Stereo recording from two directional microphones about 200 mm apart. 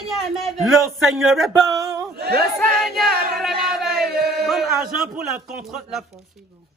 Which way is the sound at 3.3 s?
Centre (ahead or behind).